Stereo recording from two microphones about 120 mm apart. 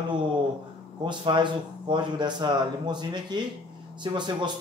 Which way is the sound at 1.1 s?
40° right (ahead or behind).